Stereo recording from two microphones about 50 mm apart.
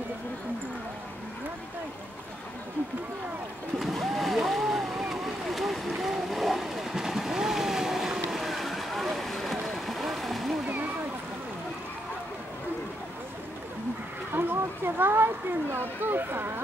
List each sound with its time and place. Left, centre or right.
3.8 s vehicle: centre
14.3 s speech: right